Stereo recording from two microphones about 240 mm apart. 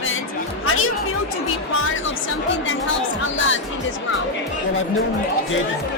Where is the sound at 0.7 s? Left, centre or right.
Left.